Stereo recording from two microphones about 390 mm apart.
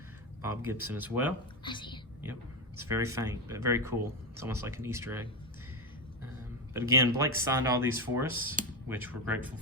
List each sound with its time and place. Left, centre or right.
0.4 s speech: centre
1.6 s speech: centre
2.9 s speech: centre
6.7 s speech: centre